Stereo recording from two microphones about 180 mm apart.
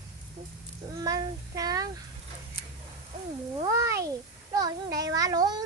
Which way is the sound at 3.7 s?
15° right (ahead or behind).